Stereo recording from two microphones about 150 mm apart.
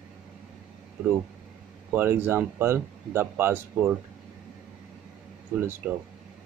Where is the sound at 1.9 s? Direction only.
15° right (ahead or behind).